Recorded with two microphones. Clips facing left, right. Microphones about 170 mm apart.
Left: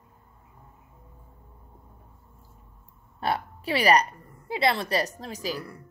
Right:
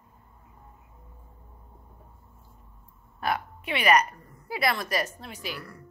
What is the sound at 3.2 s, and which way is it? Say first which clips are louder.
A woman's voice: left 1 dB; 30° left (ahead or behind).